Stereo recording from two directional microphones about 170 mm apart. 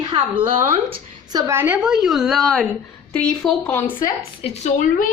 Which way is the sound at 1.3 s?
20° right (ahead or behind).